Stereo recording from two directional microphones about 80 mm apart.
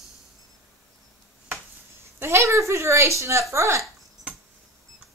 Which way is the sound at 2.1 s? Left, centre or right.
Right.